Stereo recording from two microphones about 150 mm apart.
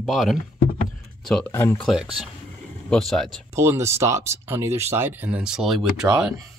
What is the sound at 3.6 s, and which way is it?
Speech, 20° right (ahead or behind).